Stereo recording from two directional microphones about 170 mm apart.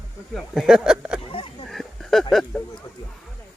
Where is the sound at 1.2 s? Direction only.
30° left (ahead or behind).